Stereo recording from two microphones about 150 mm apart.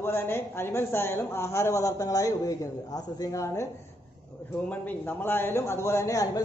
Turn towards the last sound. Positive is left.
turn(degrees=20)  # may be behind; listen again after turning